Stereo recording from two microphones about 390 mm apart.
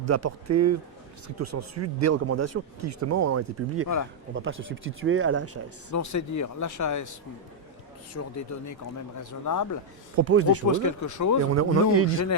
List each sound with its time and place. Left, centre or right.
0.0 s speech: right
5.9 s speech: left
8.1 s speech: left
10.2 s speech: right
10.7 s speech: left
11.4 s speech: right